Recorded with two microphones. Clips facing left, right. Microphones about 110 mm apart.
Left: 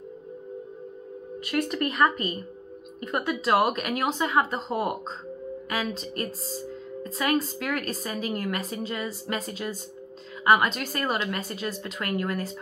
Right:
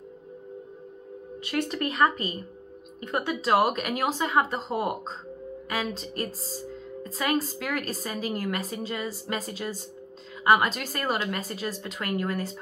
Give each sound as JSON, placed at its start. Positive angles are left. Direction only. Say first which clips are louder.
{"t": 1.4, "sound": "a woman's voice", "louder": "left 2 dB", "side_deg": -30}